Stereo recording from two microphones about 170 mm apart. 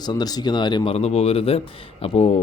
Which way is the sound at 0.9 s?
40° left (ahead or behind).